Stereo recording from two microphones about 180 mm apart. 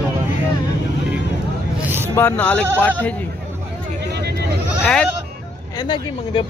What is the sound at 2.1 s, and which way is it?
Speech, 10° left (ahead or behind).